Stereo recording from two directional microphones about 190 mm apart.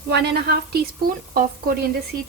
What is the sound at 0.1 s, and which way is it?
Speech, 60° right (ahead or behind).